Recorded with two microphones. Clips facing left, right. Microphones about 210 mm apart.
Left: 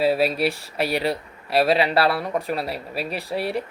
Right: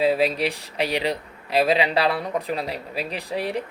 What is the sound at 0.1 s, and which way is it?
Speech, 10° left (ahead or behind).